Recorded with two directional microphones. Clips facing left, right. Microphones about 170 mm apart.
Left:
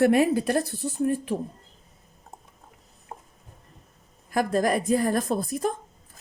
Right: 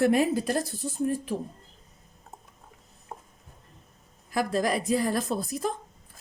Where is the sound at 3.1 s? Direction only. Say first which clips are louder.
Even; 10° left (ahead or behind).